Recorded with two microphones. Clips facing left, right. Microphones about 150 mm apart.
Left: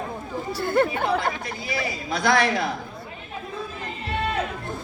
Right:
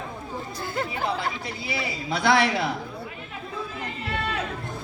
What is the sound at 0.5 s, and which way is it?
Speech, 60° left (ahead or behind).